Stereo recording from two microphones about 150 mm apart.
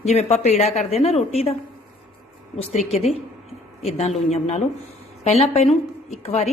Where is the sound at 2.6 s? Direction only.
45° left (ahead or behind).